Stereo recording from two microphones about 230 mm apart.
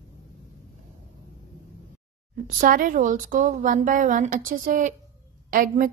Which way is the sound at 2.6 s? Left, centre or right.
Right.